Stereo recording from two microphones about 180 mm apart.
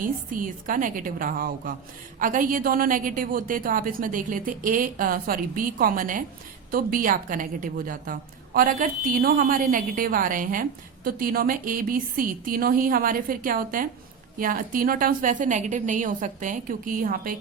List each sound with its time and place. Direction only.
0.0 s a woman's voice: 50° right (ahead or behind)